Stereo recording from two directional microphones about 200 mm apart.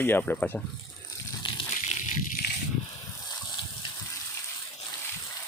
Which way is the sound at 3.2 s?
20° left (ahead or behind).